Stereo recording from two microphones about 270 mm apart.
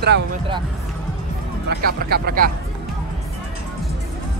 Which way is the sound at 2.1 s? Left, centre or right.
Right.